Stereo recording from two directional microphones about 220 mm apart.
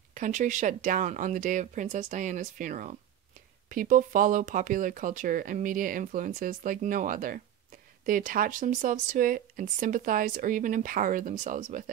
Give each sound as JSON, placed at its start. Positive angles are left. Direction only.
{"t": 0.1, "sound": "speech", "side_deg": -35}